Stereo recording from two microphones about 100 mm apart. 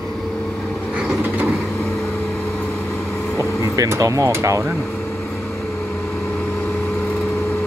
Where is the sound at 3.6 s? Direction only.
30° right (ahead or behind).